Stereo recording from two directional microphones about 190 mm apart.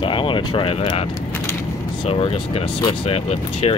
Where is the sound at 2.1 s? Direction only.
30° left (ahead or behind).